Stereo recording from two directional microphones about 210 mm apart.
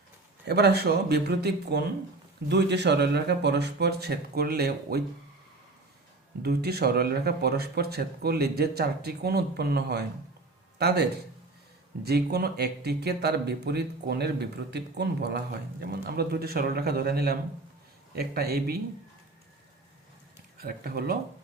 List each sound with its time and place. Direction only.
0.4 s speech: 50° right (ahead or behind)
6.4 s speech: 50° right (ahead or behind)
12.0 s speech: 50° right (ahead or behind)
20.6 s speech: 45° right (ahead or behind)